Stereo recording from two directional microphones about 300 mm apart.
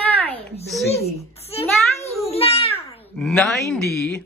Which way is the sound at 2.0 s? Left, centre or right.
Centre.